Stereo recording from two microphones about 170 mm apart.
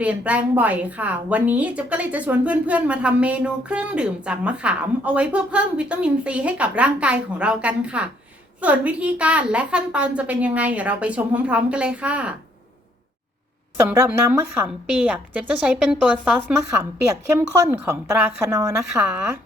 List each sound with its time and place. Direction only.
0.0 s a woman's voice: 10° right (ahead or behind)
13.7 s a woman's voice: 10° right (ahead or behind)
17.7 s a woman's voice: 15° right (ahead or behind)